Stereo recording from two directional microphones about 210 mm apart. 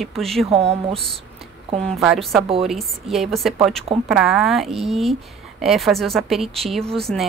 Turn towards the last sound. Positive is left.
turn(degrees=0)  # may be behind; listen again after turning